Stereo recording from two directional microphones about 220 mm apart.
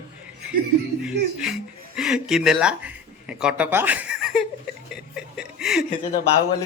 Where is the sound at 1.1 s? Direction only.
50° right (ahead or behind).